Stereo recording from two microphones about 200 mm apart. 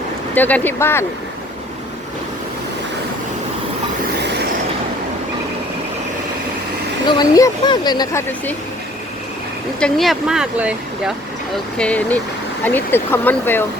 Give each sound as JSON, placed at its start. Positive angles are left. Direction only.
{"t": 0.3, "sound": "speech", "side_deg": 10}
{"t": 7.1, "sound": "speech", "side_deg": 20}
{"t": 9.8, "sound": "speech", "side_deg": 0}
{"t": 11.8, "sound": "speech", "side_deg": 5}